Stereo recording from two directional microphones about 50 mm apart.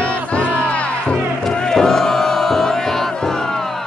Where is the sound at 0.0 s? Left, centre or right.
Left.